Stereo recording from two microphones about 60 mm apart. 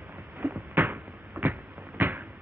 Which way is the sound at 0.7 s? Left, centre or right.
Right.